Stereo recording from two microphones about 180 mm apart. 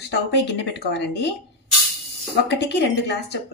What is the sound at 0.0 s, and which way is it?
Speech, 70° left (ahead or behind).